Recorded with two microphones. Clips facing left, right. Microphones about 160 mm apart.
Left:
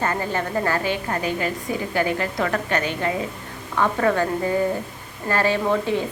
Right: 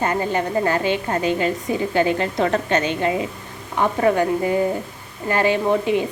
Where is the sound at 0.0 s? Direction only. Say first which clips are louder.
Right 3 dB; 20° right (ahead or behind).